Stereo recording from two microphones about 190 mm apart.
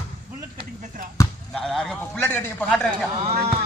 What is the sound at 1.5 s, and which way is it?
A man's voice, centre (ahead or behind).